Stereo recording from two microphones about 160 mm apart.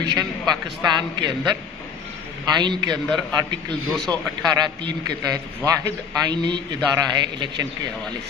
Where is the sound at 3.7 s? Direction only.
5° left (ahead or behind).